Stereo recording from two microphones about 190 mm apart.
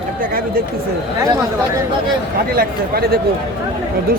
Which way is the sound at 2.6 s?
55° right (ahead or behind).